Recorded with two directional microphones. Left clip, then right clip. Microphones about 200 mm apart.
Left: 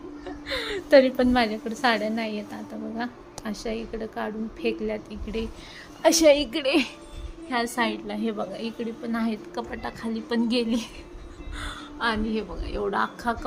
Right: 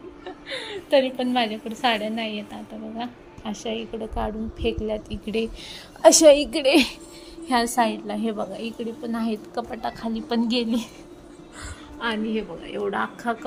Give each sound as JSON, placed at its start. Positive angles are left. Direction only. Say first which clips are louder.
{"t": 0.6, "sound": "a sound", "louder": "left 3 dB", "side_deg": 25}
{"t": 1.3, "sound": "a woman's voice", "louder": "even", "side_deg": 15}
{"t": 3.6, "sound": "a woman's voice", "louder": "right 2 dB", "side_deg": 0}
{"t": 5.2, "sound": "a woman's voice", "louder": "right 5 dB", "side_deg": -20}
{"t": 7.8, "sound": "a woman's voice", "louder": "right 4 dB", "side_deg": -5}